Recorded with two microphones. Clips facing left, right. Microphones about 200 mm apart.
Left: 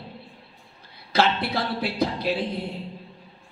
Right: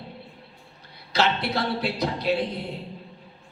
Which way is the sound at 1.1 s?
55° left (ahead or behind).